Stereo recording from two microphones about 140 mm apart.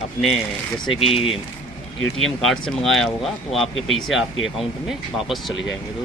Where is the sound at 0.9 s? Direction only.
45° left (ahead or behind).